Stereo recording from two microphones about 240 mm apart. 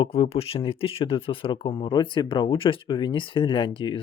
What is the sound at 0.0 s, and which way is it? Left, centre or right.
Speech, left.